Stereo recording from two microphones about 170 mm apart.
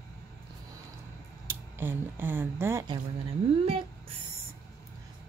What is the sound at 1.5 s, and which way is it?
Speech, 15° right (ahead or behind).